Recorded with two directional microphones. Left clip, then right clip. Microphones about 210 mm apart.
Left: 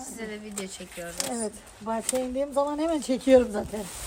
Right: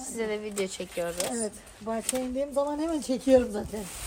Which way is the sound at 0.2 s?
20° right (ahead or behind).